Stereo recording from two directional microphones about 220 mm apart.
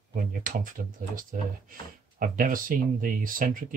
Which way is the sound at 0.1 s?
40° right (ahead or behind).